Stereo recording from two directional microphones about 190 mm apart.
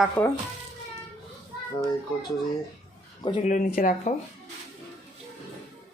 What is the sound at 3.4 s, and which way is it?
Speech, 40° left (ahead or behind).